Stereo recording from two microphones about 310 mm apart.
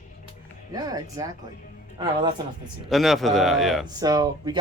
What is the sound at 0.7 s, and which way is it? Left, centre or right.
Speech, centre.